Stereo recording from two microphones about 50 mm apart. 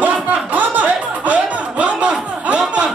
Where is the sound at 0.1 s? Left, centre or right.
Right.